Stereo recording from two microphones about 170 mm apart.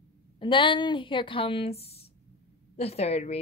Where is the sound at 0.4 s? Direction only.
30° left (ahead or behind).